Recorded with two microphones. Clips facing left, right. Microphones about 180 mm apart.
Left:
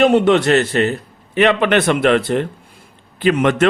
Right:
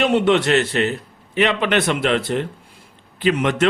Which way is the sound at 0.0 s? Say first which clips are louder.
Left 4 dB; 45° left (ahead or behind).